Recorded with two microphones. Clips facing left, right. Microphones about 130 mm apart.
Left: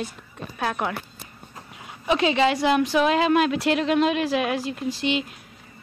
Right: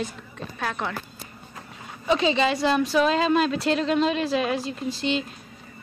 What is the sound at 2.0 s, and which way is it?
A woman's voice, 10° left (ahead or behind).